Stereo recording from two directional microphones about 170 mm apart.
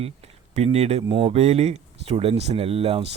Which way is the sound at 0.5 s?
40° right (ahead or behind).